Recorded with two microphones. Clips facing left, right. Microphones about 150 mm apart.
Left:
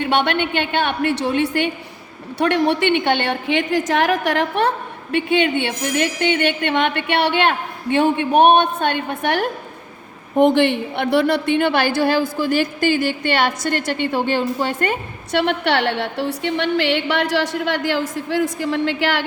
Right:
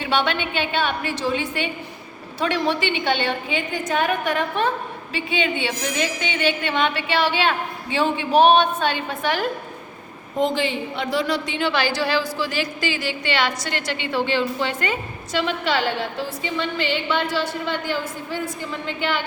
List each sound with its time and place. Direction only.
0.0 s a woman's voice: 60° left (ahead or behind)
5.1 s a woman's voice: 60° left (ahead or behind); by 19.2 s 80° left